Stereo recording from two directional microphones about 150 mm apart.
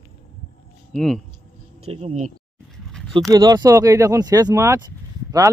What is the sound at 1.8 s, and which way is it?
Speech, 50° right (ahead or behind).